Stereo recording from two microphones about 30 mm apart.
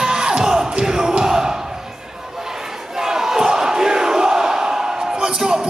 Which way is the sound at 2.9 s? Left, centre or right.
Centre.